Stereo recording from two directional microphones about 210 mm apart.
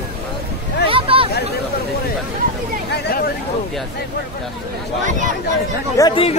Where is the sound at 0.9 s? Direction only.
25° right (ahead or behind).